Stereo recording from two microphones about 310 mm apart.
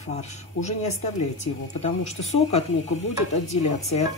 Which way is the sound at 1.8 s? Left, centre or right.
Left.